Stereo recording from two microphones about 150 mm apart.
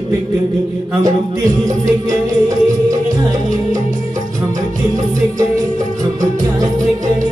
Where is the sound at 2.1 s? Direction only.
25° right (ahead or behind).